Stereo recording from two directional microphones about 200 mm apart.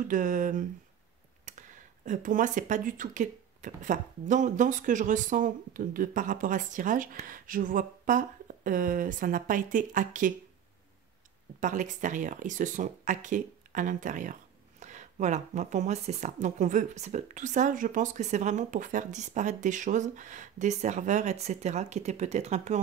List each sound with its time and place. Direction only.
0.1 s speech: 40° right (ahead or behind)
11.6 s speech: 40° right (ahead or behind)